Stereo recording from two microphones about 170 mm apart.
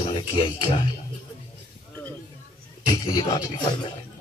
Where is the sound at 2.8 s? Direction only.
20° left (ahead or behind).